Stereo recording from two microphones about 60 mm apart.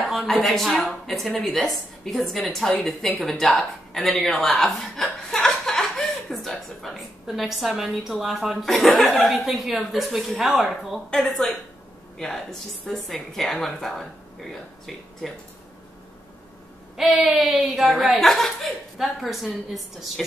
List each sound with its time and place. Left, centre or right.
0.0 s a woman's voice: centre
17.1 s a sound: centre
17.4 s a woman's voice: centre